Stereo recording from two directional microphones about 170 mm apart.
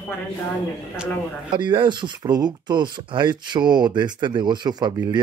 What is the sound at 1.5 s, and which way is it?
Speech, 30° right (ahead or behind).